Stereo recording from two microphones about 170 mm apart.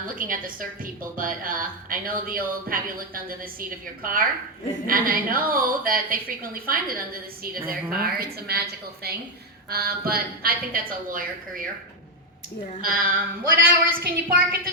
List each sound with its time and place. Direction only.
0.2 s a woman's voice: 55° right (ahead or behind)
12.8 s speech: 60° right (ahead or behind)